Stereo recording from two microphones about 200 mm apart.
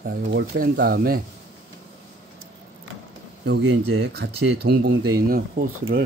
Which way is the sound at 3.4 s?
60° right (ahead or behind).